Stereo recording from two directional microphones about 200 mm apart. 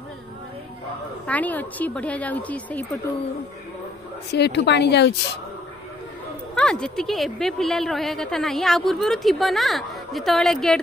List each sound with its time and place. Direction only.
1.2 s speech: 10° left (ahead or behind)
4.3 s speech: 60° left (ahead or behind)
6.5 s a woman's voice: 5° left (ahead or behind)